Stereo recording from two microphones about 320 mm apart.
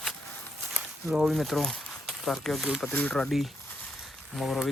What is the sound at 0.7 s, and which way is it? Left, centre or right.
Speech, centre.